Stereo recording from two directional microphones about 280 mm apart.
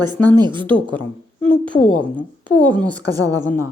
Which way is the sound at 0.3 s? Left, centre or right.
Centre.